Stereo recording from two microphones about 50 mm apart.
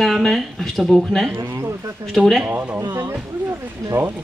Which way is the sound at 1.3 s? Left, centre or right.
Right.